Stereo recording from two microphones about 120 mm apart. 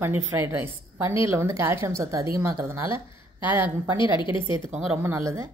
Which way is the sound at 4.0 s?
40° left (ahead or behind).